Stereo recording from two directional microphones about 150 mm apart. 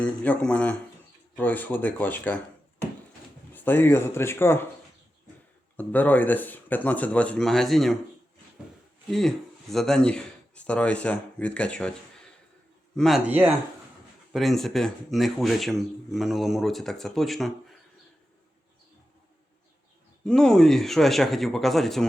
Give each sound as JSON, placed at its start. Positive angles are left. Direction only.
{"t": 0.0, "sound": "speech", "side_deg": 10}
{"t": 3.5, "sound": "speech", "side_deg": 15}
{"t": 5.7, "sound": "speech", "side_deg": 10}
{"t": 9.0, "sound": "speech", "side_deg": 0}
{"t": 13.0, "sound": "speech", "side_deg": 0}
{"t": 13.2, "sound": "speech", "side_deg": -10}
{"t": 14.3, "sound": "speech", "side_deg": 0}
{"t": 20.2, "sound": "speech", "side_deg": 5}